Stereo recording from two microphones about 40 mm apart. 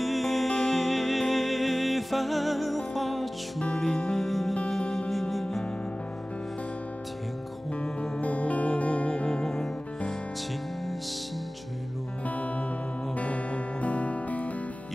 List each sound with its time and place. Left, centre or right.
0.0 s music: centre
7.8 s music: left
9.3 s music: centre
12.3 s music: left